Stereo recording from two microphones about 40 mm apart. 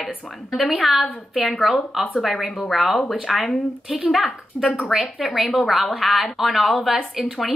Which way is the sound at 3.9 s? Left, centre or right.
Centre.